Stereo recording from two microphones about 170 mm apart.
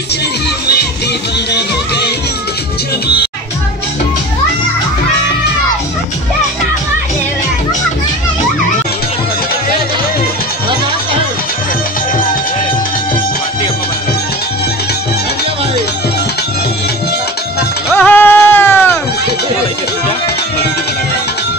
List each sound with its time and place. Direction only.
1.5 s music: 75° left (ahead or behind)
17.9 s music: 10° left (ahead or behind)